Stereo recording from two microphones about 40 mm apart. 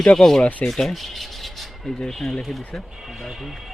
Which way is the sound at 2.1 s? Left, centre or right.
Centre.